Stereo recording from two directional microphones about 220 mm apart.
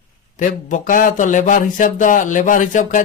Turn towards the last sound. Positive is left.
turn(degrees=35)  # may be behind; listen again after turning